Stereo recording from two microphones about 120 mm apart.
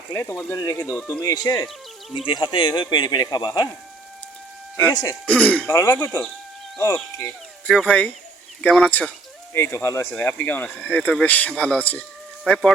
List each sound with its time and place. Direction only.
0.1 s speech: 15° left (ahead or behind)
0.5 s speech: 30° left (ahead or behind)
2.1 s speech: 40° left (ahead or behind)
4.9 s speech: 30° left (ahead or behind)
5.2 s speech: 10° left (ahead or behind)
5.6 s speech: 25° left (ahead or behind)
7.6 s speech: 5° left (ahead or behind)
9.5 s speech: 20° left (ahead or behind)